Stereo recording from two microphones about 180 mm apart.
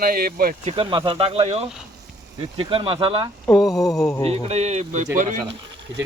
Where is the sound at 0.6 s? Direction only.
35° right (ahead or behind).